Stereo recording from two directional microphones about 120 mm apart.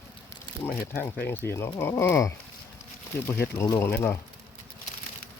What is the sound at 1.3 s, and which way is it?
Speech, 20° left (ahead or behind).